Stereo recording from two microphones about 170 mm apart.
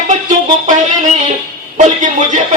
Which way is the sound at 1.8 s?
45° right (ahead or behind).